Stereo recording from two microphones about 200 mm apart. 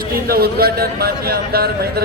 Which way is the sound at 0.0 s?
50° right (ahead or behind).